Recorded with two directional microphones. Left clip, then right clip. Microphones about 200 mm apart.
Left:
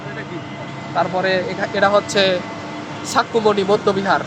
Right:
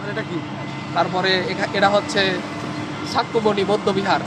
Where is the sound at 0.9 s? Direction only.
20° left (ahead or behind).